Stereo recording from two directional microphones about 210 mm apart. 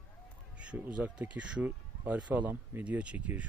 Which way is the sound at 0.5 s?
5° right (ahead or behind).